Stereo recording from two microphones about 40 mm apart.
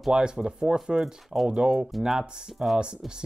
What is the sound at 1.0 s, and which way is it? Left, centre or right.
Speech, centre.